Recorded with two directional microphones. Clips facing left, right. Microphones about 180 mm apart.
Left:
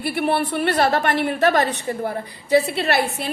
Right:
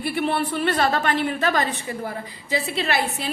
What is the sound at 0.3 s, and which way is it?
A woman's voice, 55° left (ahead or behind).